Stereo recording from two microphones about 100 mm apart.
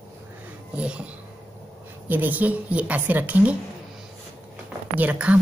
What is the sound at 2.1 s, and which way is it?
A woman's voice, 20° right (ahead or behind).